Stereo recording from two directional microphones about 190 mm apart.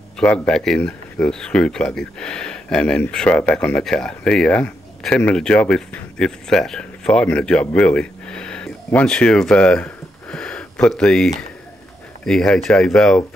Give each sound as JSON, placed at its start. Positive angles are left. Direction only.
{"t": 0.2, "sound": "speech", "side_deg": 5}